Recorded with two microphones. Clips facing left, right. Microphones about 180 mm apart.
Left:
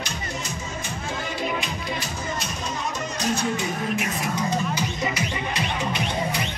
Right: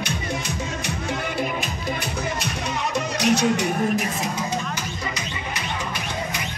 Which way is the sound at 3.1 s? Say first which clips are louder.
Right 6 dB; 75° right (ahead or behind).